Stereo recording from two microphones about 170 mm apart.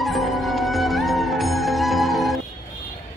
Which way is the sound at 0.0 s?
Centre (ahead or behind).